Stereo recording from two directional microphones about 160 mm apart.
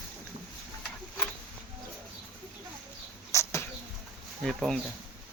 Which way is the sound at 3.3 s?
15° left (ahead or behind).